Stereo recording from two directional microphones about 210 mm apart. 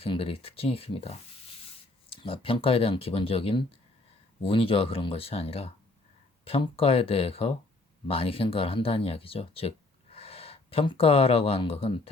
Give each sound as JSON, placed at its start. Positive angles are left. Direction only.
{"t": 0.0, "sound": "speech", "side_deg": 25}